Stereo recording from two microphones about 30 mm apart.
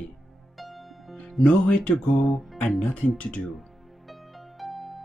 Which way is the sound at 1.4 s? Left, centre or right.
Left.